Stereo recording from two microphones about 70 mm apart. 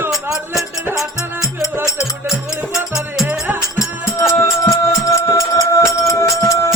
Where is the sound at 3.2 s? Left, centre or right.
Right.